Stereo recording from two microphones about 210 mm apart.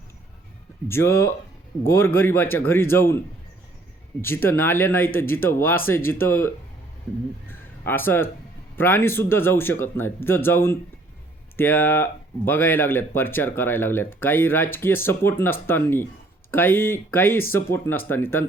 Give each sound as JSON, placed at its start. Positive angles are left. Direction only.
{"t": 0.9, "sound": "speech", "side_deg": 10}
{"t": 4.2, "sound": "speech", "side_deg": 10}